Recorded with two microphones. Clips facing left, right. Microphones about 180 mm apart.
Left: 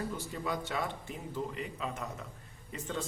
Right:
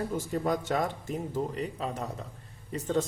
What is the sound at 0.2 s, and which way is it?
Speech, 45° right (ahead or behind).